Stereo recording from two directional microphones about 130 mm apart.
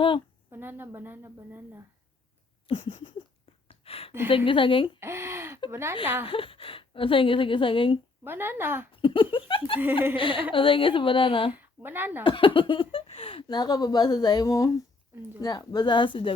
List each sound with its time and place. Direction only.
0.5 s a woman's voice: 15° right (ahead or behind)
2.6 s a sound: 40° left (ahead or behind)
4.3 s speech: 40° left (ahead or behind)
4.9 s a woman's voice: 20° right (ahead or behind)
6.2 s a woman's voice: 45° left (ahead or behind)
8.2 s a woman's voice: 15° right (ahead or behind)
8.9 s a woman's voice: 40° left (ahead or behind)
11.5 s speech: 15° right (ahead or behind)
12.2 s speech: 40° left (ahead or behind)